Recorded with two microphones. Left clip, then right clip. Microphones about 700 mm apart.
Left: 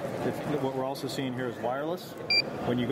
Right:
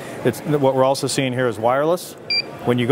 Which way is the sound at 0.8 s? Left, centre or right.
Right.